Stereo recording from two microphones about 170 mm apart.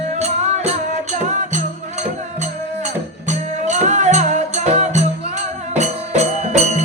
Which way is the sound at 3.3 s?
45° right (ahead or behind).